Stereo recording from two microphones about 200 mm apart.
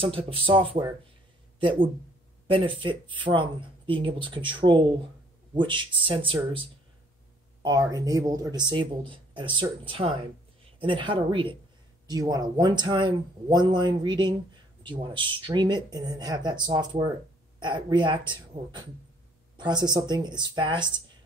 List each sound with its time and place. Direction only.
0.0 s speech: 25° right (ahead or behind)
7.6 s speech: 20° right (ahead or behind)